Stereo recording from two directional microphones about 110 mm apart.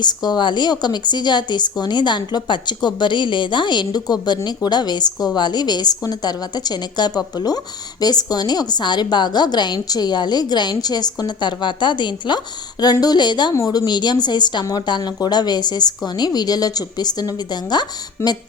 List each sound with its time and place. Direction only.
0.0 s a woman's voice: 40° left (ahead or behind)
18.2 s speech: 20° left (ahead or behind)